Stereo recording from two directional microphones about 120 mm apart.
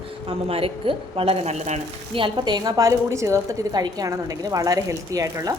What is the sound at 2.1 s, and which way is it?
A woman's voice, 40° right (ahead or behind).